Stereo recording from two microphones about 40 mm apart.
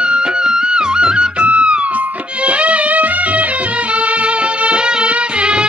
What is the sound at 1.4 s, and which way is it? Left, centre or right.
Music, right.